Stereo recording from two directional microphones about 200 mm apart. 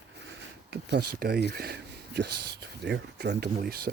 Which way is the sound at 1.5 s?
50° right (ahead or behind).